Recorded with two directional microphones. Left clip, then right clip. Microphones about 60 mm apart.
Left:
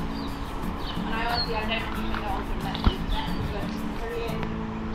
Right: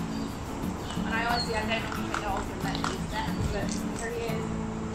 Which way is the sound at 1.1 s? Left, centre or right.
Right.